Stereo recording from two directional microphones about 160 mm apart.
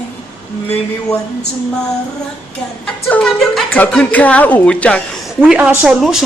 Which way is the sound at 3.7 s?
10° left (ahead or behind).